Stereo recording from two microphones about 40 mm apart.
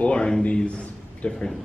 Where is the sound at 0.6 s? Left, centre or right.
Left.